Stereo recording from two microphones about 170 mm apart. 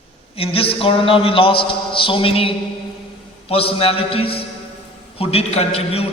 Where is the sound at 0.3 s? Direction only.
35° left (ahead or behind).